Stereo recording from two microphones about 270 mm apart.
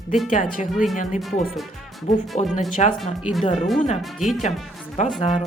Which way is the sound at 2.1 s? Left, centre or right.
Centre.